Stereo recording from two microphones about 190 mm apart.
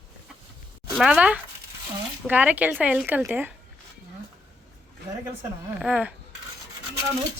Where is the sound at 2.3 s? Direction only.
10° right (ahead or behind).